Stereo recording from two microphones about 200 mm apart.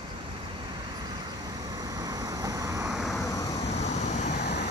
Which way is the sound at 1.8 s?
20° right (ahead or behind).